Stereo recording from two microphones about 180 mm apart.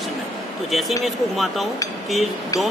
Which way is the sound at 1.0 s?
Centre (ahead or behind).